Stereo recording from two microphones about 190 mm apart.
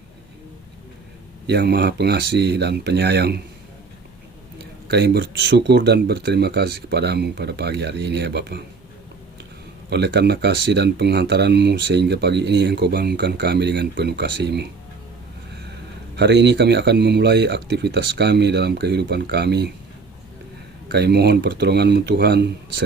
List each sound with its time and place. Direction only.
1.5 s speech: 60° right (ahead or behind)
4.9 s speech: 60° right (ahead or behind)
9.9 s speech: 60° right (ahead or behind)
16.1 s speech: 65° right (ahead or behind)
20.9 s speech: 60° right (ahead or behind)